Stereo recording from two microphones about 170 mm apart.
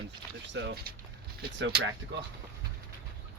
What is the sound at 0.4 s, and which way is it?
Speech, 90° right.